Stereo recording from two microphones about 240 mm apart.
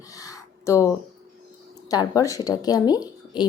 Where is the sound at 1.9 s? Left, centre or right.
Centre.